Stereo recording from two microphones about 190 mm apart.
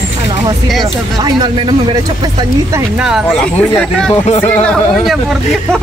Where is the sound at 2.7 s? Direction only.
5° right (ahead or behind).